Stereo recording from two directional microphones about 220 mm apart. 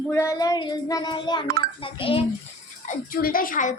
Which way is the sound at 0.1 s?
15° left (ahead or behind).